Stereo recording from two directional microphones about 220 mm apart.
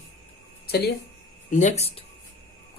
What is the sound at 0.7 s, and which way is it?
Speech, 45° left (ahead or behind).